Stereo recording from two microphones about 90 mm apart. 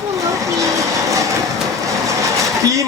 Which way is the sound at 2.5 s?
35° right (ahead or behind).